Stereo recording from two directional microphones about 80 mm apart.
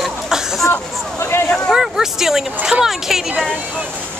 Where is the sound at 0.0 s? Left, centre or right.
Centre.